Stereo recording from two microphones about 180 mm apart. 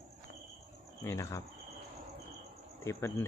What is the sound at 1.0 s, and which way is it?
Speech, 15° left (ahead or behind).